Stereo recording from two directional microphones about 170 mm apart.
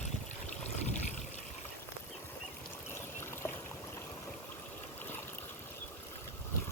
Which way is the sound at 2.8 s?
15° left (ahead or behind).